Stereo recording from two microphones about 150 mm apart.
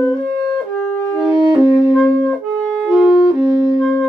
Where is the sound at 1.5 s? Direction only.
10° right (ahead or behind).